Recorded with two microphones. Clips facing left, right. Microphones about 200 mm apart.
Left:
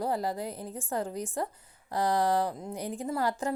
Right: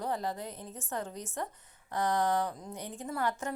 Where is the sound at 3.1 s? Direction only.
30° left (ahead or behind).